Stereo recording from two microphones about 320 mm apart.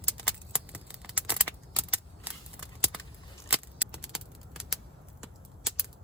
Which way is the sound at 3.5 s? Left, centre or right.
Centre.